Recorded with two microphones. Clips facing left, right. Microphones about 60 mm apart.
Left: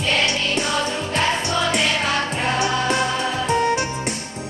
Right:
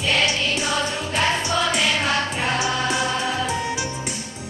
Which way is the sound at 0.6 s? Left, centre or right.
Centre.